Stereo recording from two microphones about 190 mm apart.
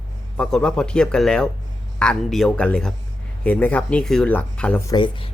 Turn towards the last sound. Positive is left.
turn(degrees=25)  # may be behind; listen again after turning